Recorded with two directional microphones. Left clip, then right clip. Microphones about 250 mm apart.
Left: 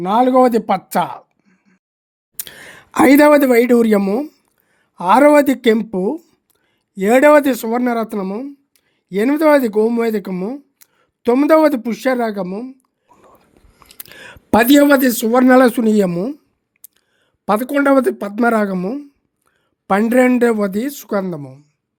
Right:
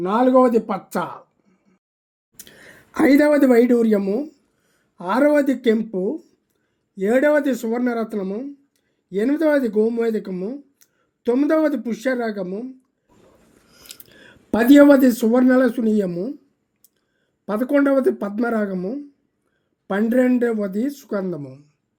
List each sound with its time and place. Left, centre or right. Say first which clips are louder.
0.0 s speech: left 4 dB; left
2.3 s speech: left 9 dB; left
14.0 s speech: left 10 dB; left
17.4 s speech: left 4 dB; left